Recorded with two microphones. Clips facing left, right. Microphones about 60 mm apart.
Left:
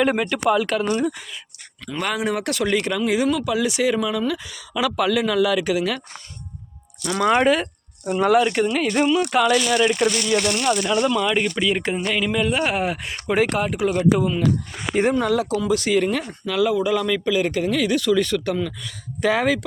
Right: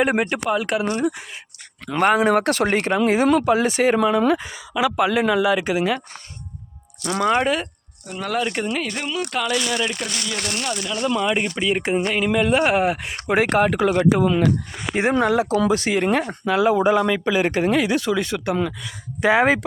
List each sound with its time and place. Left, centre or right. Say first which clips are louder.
0.0 s speech: right 1 dB; right
0.4 s speech: left 2 dB; centre
1.9 s speech: right 7 dB; right
4.5 s speech: right 2 dB; right
7.1 s speech: left 2 dB; centre
10.7 s speech: left 5 dB; left
11.1 s speech: left 1 dB; centre
12.0 s speech: right 1 dB; right
12.3 s speech: right 6 dB; right
13.6 s speech: right 3 dB; right
15.2 s speech: right 3 dB; right